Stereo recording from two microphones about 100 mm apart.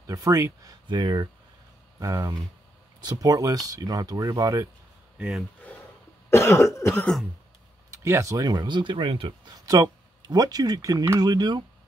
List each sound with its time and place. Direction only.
0.0 s speech: 35° right (ahead or behind)
0.8 s speech: 45° right (ahead or behind)
6.3 s cough: 25° left (ahead or behind)
7.9 s speech: 30° right (ahead or behind); by 9.5 s 55° right (ahead or behind)
9.5 s speech: 40° right (ahead or behind)